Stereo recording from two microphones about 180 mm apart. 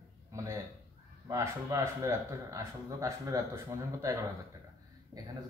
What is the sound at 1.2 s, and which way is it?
Speech, 15° right (ahead or behind).